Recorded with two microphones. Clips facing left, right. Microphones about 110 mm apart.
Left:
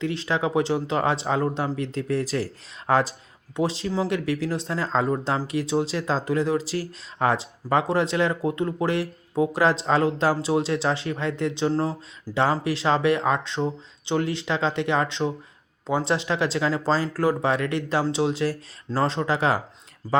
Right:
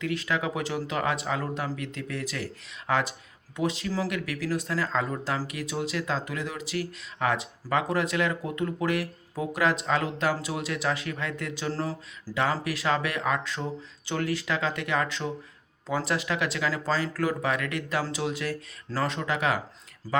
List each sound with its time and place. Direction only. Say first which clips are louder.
0.0 s speech: left 4 dB; 30° left (ahead or behind)
20.0 s speech: left 5 dB; 20° left (ahead or behind)